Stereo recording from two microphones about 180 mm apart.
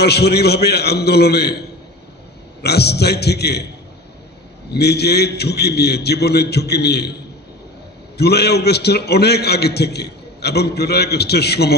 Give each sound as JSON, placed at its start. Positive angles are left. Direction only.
{"t": 0.0, "sound": "a man's voice", "side_deg": 65}
{"t": 2.6, "sound": "a man's voice", "side_deg": 65}
{"t": 4.7, "sound": "a man's voice", "side_deg": 65}
{"t": 8.2, "sound": "a man's voice", "side_deg": 65}